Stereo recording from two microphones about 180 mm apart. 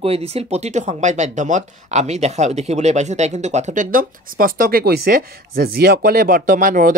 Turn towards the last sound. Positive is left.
turn(degrees=-45)  # may be behind; listen again after turning